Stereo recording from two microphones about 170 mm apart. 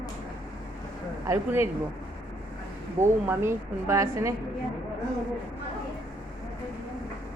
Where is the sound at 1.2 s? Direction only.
15° right (ahead or behind).